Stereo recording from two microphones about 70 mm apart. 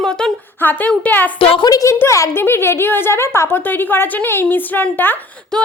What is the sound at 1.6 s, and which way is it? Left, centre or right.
Speech, left.